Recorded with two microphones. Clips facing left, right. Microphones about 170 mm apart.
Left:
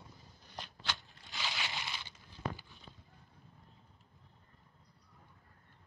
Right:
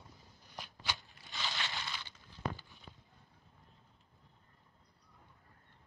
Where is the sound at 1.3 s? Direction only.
10° left (ahead or behind).